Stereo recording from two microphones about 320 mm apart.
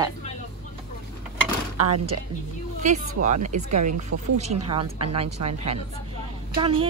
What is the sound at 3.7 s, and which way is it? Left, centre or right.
Speech, right.